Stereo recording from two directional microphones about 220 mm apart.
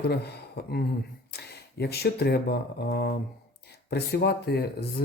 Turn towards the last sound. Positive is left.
turn(degrees=45)  # may be behind; listen again after turning